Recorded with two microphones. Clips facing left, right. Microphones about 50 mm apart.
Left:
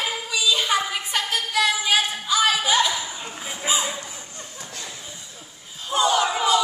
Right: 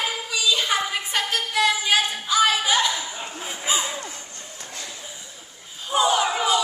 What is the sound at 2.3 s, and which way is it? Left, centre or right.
Music, centre.